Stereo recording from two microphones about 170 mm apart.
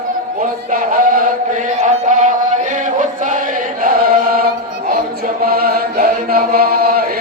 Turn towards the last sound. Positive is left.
turn(degrees=-60)  # may be behind; listen again after turning